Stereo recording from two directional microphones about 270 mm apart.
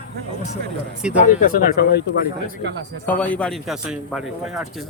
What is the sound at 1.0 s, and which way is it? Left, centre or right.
Speech, centre.